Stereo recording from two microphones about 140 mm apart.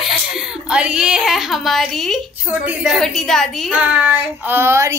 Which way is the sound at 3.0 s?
5° left (ahead or behind).